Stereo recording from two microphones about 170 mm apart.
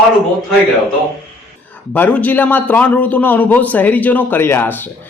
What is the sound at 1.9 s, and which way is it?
A man's voice, 10° left (ahead or behind).